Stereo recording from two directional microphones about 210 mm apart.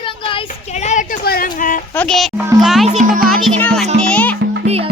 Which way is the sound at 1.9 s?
5° left (ahead or behind).